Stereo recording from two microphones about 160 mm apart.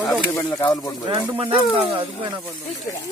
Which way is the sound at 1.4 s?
35° right (ahead or behind).